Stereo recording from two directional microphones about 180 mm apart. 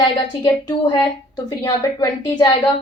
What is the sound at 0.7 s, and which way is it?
A woman's voice, 25° left (ahead or behind).